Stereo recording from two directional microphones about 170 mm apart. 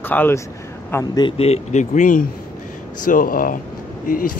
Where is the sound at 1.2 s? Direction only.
35° left (ahead or behind).